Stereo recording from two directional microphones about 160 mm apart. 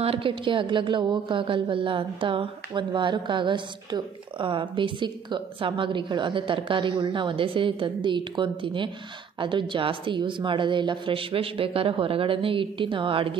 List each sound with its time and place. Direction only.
0.0 s a woman's voice: 35° right (ahead or behind)